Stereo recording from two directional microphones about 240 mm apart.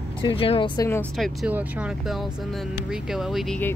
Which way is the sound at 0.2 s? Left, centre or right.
Left.